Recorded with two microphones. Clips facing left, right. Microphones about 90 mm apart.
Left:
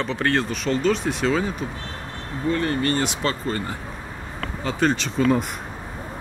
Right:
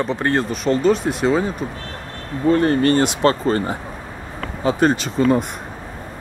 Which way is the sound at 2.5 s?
40° right (ahead or behind).